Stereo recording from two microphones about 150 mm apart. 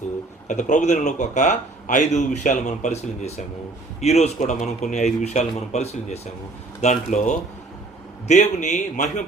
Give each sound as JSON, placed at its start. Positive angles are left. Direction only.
{"t": 0.4, "sound": "a man's voice", "side_deg": 55}